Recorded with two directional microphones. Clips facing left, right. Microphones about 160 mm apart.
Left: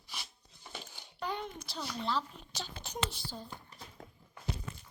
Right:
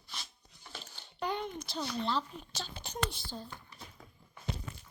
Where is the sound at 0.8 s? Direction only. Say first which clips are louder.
Left 2 dB; 15° left (ahead or behind).